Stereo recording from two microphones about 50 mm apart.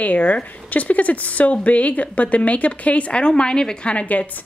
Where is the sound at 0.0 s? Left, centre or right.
Left.